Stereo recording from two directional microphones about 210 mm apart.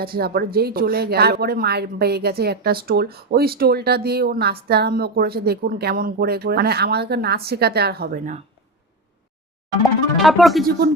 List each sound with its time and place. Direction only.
0.0 s a woman's voice: 45° right (ahead or behind)
10.2 s speech: centre (ahead or behind)
10.6 s a woman's voice: 45° right (ahead or behind)